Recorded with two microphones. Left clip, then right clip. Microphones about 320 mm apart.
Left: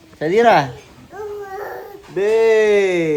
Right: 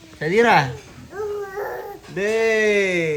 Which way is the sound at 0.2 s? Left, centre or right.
Centre.